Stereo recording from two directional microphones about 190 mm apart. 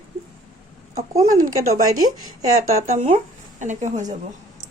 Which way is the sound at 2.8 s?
35° right (ahead or behind).